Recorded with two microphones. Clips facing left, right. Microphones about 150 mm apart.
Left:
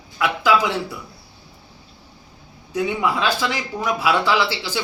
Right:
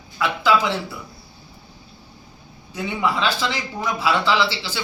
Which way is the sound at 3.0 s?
10° left (ahead or behind).